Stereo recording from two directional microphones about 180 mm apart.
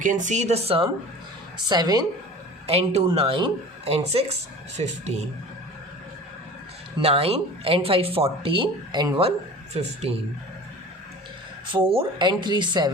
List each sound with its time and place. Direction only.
0.0 s speech: 45° right (ahead or behind)
1.7 s speech: 20° right (ahead or behind)
2.6 s speech: 35° right (ahead or behind)
7.0 s speech: 35° right (ahead or behind)
11.9 s speech: 25° right (ahead or behind)